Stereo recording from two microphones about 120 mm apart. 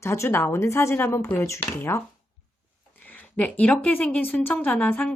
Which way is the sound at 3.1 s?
15° left (ahead or behind).